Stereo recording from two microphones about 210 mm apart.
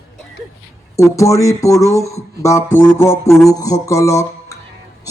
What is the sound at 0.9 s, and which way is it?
Speech, 15° left (ahead or behind).